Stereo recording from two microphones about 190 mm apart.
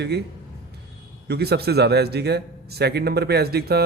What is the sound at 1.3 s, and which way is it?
A man's voice, 55° right (ahead or behind).